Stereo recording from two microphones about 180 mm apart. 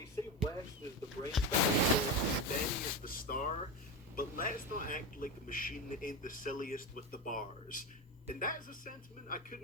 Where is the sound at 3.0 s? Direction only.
50° left (ahead or behind).